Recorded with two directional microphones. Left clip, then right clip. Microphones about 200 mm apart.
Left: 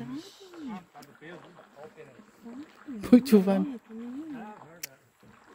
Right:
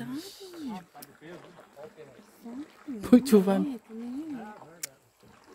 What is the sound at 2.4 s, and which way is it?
Speech, 45° right (ahead or behind).